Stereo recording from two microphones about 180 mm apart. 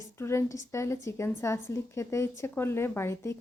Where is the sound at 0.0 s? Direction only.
15° left (ahead or behind).